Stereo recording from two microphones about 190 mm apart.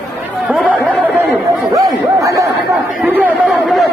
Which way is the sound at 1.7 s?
20° right (ahead or behind).